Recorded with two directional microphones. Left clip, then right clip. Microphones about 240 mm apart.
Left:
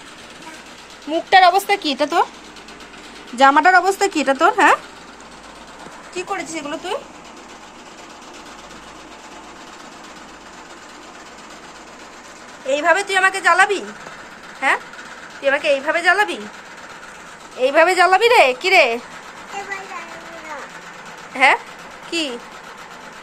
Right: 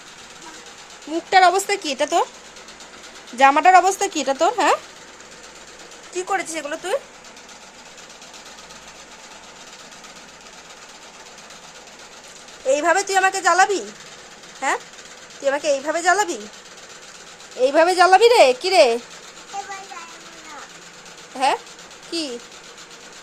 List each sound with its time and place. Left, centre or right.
1.3 s a woman's voice: centre
3.3 s speech: centre
6.1 s a woman's voice: right
12.6 s speech: right
17.6 s speech: right
21.3 s speech: centre